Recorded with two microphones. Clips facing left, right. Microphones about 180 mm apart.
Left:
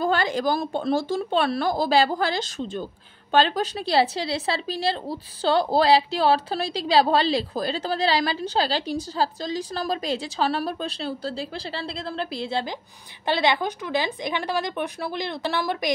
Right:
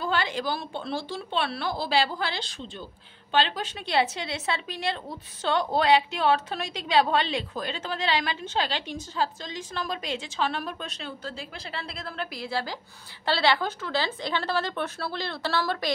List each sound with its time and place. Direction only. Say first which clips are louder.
0.0 s a woman's voice: left 5 dB; 45° left (ahead or behind); by 15.9 s 15° left (ahead or behind)